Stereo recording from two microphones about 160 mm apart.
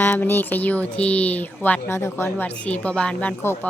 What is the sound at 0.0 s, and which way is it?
A woman's voice, 10° left (ahead or behind).